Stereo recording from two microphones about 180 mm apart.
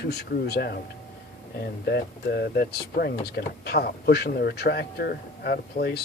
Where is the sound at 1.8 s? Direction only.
65° left (ahead or behind).